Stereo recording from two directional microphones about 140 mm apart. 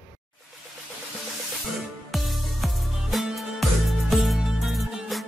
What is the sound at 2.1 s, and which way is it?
Music, centre (ahead or behind).